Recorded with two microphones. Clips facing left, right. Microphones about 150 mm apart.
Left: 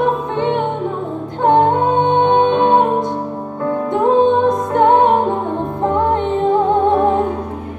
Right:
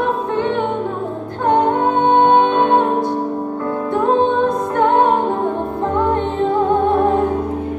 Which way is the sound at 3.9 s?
20° left (ahead or behind).